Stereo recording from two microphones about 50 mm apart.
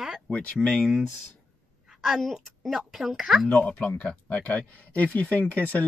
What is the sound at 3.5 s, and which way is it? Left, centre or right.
Speech, left.